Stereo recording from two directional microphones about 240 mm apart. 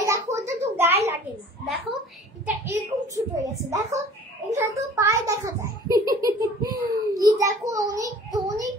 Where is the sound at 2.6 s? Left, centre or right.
Centre.